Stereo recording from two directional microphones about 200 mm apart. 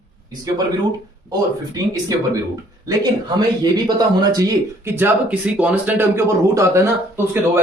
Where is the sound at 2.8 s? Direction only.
20° right (ahead or behind).